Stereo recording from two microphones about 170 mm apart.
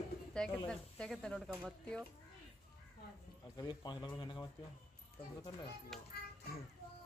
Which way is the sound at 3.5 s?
25° left (ahead or behind).